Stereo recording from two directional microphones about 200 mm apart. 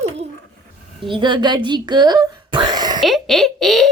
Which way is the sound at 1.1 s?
25° right (ahead or behind).